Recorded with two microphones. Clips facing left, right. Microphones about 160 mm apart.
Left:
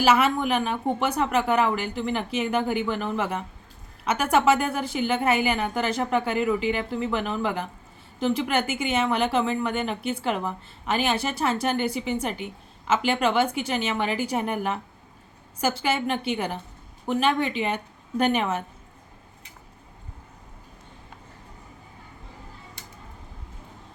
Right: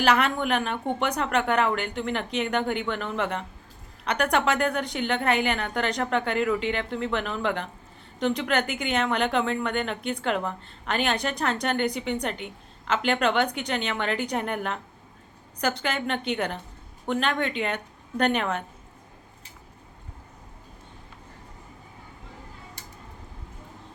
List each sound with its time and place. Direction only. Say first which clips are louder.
0.0 s a woman's voice: left 2 dB; 5° left (ahead or behind)